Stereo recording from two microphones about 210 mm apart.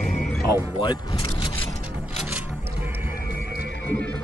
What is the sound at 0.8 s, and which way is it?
Speech, 20° left (ahead or behind).